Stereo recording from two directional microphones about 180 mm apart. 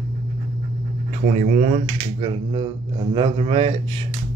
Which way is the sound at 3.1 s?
30° right (ahead or behind).